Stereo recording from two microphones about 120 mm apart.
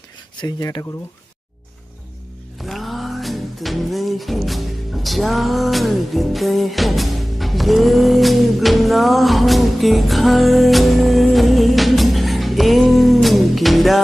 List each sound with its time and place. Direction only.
0.4 s speech: 30° left (ahead or behind)
2.6 s music: centre (ahead or behind)